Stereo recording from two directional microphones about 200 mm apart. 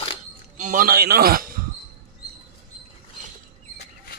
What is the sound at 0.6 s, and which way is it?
A man's voice, 40° right (ahead or behind).